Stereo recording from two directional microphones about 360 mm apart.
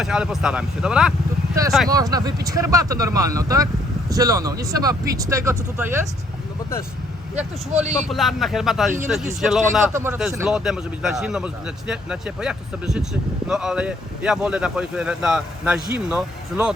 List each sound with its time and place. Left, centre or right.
0.0 s speech: centre
7.7 s speech: centre
8.1 s speech: centre